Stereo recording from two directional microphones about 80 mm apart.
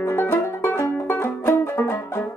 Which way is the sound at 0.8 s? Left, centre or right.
Left.